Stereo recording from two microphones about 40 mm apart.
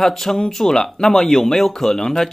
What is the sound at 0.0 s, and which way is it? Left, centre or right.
Speech, centre.